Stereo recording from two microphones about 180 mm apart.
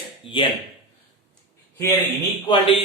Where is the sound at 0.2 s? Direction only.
30° left (ahead or behind).